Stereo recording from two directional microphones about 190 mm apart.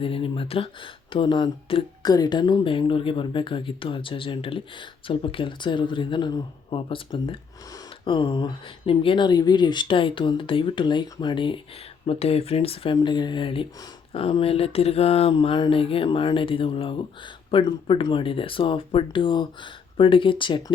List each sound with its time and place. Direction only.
0.0 s speech: 30° left (ahead or behind)